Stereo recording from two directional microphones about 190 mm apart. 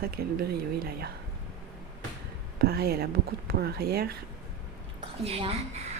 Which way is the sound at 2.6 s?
55° right (ahead or behind).